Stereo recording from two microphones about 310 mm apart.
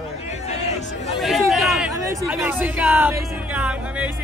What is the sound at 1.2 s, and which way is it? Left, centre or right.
Speech, centre.